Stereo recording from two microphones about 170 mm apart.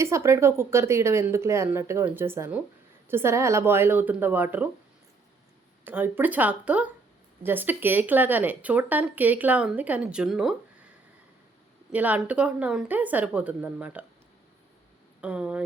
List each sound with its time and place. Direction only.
0.0 s speech: 15° right (ahead or behind)
5.8 s speech: 10° right (ahead or behind)
11.9 s speech: 10° right (ahead or behind)
15.2 s speech: 10° right (ahead or behind)